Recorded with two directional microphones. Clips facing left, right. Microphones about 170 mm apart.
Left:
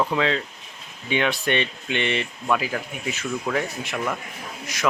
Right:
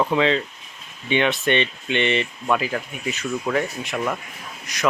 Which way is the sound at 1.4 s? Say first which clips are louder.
Right 3 dB; 10° left (ahead or behind).